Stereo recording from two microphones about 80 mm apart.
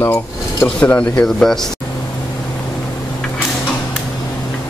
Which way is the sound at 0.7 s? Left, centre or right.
Centre.